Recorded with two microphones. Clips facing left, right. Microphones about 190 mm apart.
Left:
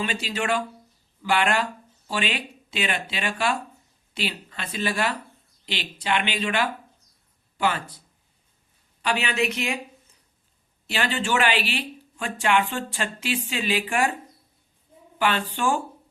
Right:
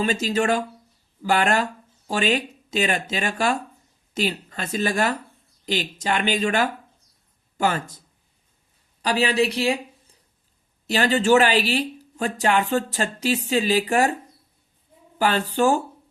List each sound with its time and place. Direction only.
0.0 s speech: 40° right (ahead or behind)
15.2 s speech: 40° right (ahead or behind)